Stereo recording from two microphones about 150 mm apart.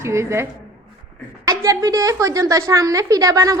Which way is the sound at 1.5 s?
25° right (ahead or behind).